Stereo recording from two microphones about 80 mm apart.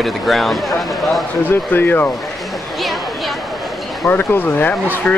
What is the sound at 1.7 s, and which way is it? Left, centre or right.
Speech, left.